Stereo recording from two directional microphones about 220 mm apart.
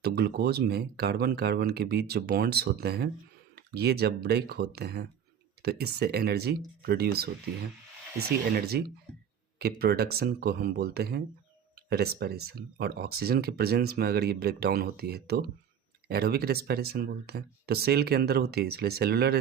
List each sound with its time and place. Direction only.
0.0 s speech: 45° right (ahead or behind)
8.5 s speech: 45° right (ahead or behind)